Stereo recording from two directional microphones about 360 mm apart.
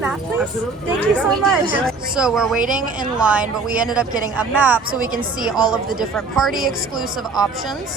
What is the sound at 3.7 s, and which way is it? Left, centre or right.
A woman's voice, centre.